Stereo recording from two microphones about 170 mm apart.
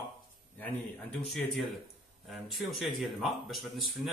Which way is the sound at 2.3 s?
Centre (ahead or behind).